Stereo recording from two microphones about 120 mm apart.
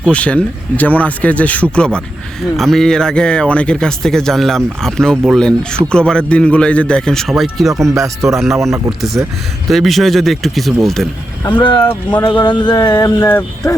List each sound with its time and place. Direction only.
0.0 s a man's voice: 10° left (ahead or behind)
11.5 s speech: 45° left (ahead or behind)
13.2 s speech: 20° left (ahead or behind)